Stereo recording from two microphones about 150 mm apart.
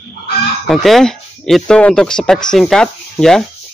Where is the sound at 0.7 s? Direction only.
Centre (ahead or behind).